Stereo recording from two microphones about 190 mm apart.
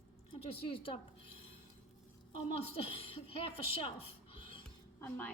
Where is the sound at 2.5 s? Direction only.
30° left (ahead or behind).